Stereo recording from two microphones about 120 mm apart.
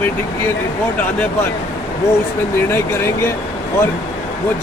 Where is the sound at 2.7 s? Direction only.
20° left (ahead or behind).